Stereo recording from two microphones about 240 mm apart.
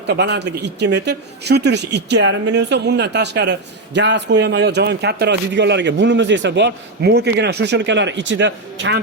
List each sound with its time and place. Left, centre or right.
0.1 s speech: right